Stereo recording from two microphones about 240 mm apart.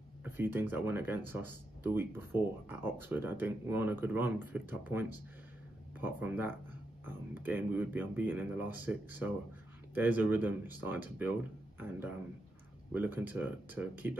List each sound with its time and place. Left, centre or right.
0.2 s speech: centre
12.9 s speech: centre